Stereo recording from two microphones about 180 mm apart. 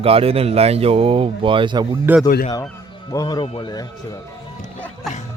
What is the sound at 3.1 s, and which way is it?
Speech, 20° left (ahead or behind).